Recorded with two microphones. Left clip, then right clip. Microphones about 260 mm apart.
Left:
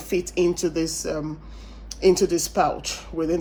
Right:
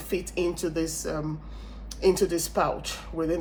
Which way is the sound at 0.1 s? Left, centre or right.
Left.